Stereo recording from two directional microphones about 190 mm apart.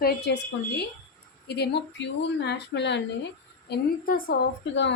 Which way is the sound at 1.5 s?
60° left (ahead or behind).